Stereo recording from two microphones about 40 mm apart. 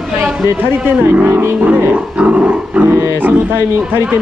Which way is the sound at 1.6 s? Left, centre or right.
Right.